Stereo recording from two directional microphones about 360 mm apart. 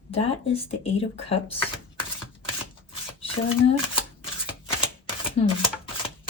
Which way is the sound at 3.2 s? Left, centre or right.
Centre.